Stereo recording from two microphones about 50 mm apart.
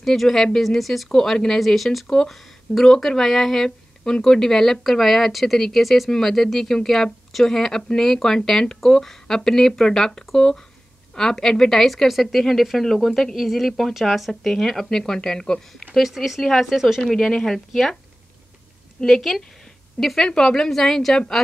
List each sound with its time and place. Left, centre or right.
0.0 s speech: centre
15.9 s speech: centre
17.0 s speech: centre
19.0 s speech: centre